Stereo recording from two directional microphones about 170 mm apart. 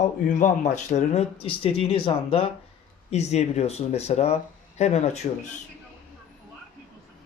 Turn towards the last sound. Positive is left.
turn(degrees=40)  # may be behind; listen again after turning